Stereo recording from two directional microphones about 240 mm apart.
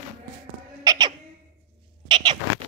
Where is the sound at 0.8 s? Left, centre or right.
Centre.